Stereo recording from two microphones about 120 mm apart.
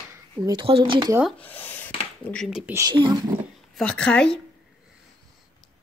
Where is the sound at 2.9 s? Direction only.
40° right (ahead or behind).